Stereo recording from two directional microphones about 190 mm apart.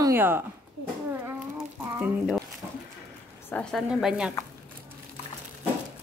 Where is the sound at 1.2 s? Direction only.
10° right (ahead or behind).